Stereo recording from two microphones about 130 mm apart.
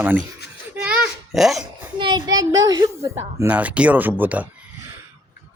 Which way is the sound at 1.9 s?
35° right (ahead or behind).